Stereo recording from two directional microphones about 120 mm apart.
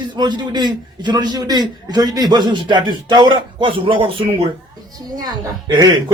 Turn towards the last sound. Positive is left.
turn(degrees=-30)  # may be behind; listen again after turning